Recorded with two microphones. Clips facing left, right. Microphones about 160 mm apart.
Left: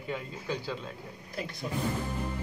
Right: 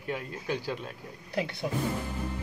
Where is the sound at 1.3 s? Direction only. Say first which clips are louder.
Right 6 dB; 70° right (ahead or behind).